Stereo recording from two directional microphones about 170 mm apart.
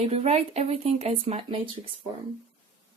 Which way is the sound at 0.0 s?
35° right (ahead or behind).